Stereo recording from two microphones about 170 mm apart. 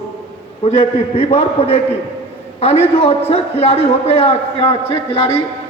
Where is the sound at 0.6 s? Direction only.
35° left (ahead or behind).